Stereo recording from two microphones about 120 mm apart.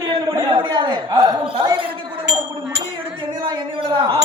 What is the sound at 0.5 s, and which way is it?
A man's voice, 40° right (ahead or behind).